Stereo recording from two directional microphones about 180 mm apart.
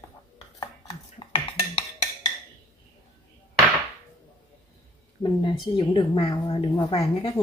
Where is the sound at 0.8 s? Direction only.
35° left (ahead or behind).